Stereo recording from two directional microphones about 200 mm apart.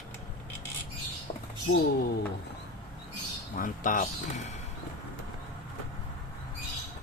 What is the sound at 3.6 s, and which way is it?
Speech, 40° left (ahead or behind).